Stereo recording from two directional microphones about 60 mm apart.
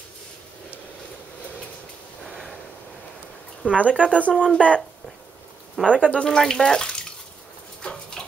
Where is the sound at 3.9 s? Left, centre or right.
Left.